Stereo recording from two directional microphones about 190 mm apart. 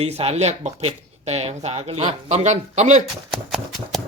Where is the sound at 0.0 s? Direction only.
30° right (ahead or behind).